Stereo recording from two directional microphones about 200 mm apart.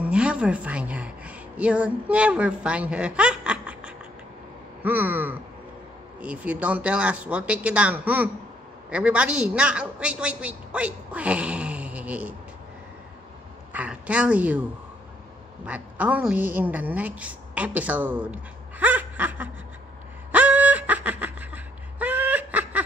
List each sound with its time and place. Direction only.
0.0 s a woman's voice: 5° right (ahead or behind)
13.7 s a woman's voice: 5° right (ahead or behind)
15.6 s a woman's voice: 5° right (ahead or behind)
20.2 s a sound: 5° right (ahead or behind)